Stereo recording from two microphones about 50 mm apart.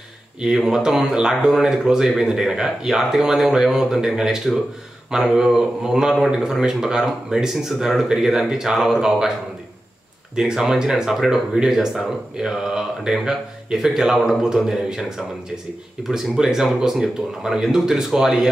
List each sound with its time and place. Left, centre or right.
0.4 s speech: centre
10.3 s speech: centre